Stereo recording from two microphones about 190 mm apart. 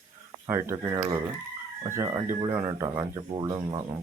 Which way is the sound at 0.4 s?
15° right (ahead or behind).